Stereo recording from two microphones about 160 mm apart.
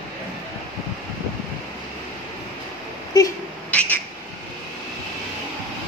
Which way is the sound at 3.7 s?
10° left (ahead or behind).